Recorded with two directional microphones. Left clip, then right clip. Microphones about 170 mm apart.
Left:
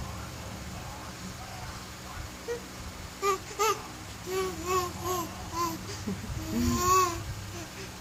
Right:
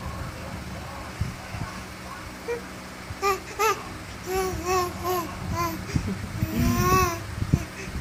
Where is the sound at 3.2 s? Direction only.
5° left (ahead or behind).